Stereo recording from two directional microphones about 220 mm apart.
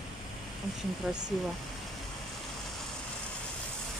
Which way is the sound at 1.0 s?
Centre (ahead or behind).